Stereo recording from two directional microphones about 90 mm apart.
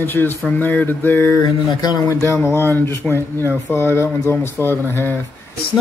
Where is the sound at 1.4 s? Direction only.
50° left (ahead or behind).